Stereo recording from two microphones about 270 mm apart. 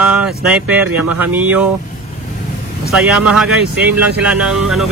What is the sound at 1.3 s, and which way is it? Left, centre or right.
Speech, centre.